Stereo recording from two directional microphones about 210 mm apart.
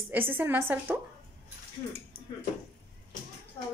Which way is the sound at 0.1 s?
10° right (ahead or behind).